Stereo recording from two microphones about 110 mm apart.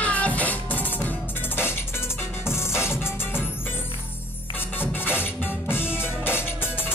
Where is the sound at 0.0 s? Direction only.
15° left (ahead or behind).